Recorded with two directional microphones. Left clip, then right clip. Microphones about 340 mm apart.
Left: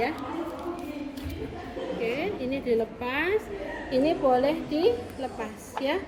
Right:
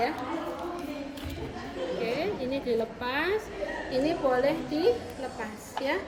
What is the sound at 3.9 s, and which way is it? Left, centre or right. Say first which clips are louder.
A woman's voice: left 4 dB; centre.